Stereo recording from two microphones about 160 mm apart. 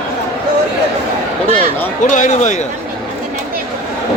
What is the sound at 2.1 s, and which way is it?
Speech, 50° left (ahead or behind).